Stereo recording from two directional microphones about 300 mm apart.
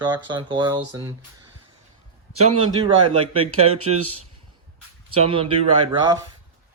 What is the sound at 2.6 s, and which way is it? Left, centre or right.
Speech, centre.